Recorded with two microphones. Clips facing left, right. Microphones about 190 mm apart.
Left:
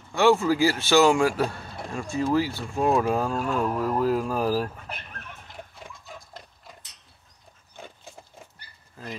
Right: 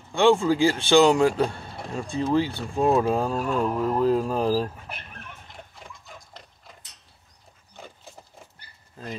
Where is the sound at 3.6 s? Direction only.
20° right (ahead or behind).